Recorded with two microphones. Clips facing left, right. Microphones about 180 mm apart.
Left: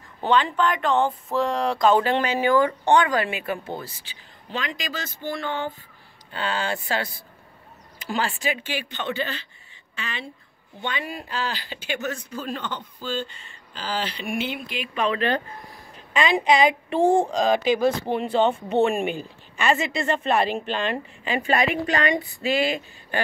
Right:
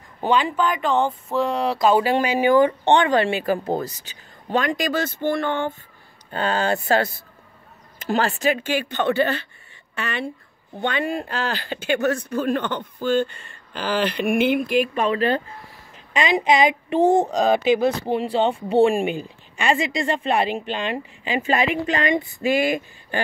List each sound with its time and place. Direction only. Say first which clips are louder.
0.2 s speech: right 1 dB; 10° right (ahead or behind); by 15.0 s 50° right (ahead or behind)
15.1 s speech: right 3 dB; 25° right (ahead or behind)
17.0 s speech: right 2 dB; 40° right (ahead or behind)
17.6 s speech: right 2 dB; 25° right (ahead or behind)
20.0 s speech: right 1 dB; 15° right (ahead or behind)